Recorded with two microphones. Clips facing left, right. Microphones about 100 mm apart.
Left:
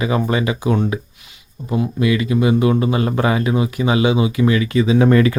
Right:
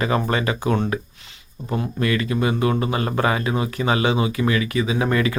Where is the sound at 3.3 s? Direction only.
30° right (ahead or behind).